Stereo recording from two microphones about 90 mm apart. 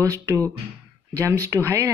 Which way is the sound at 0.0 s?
40° right (ahead or behind).